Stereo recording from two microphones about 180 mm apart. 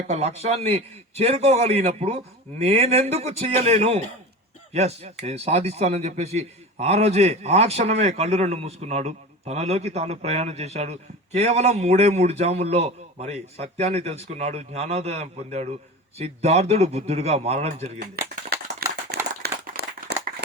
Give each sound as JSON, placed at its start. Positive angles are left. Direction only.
{"t": 0.1, "sound": "a man's voice", "side_deg": -35}
{"t": 18.8, "sound": "a sound", "side_deg": -65}
{"t": 19.4, "sound": "clapping", "side_deg": -65}